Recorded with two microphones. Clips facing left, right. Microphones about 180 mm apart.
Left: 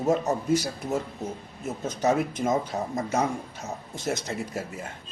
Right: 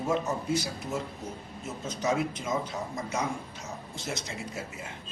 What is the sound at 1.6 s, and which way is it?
A man's voice, 60° left (ahead or behind).